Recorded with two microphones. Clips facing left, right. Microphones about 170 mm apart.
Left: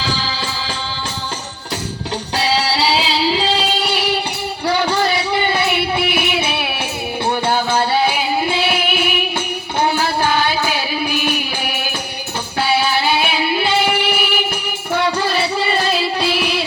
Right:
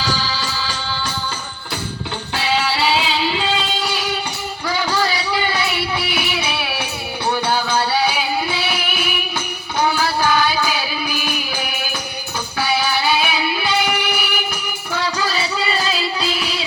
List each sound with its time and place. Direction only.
2.4 s music: 35° left (ahead or behind)
4.8 s a sound: 25° left (ahead or behind)
5.5 s a sound: 55° left (ahead or behind)
7.3 s music: 25° left (ahead or behind)
8.5 s music: 55° left (ahead or behind)
13.2 s music: 25° left (ahead or behind)
13.8 s music: 55° left (ahead or behind)
15.3 s music: 55° left (ahead or behind)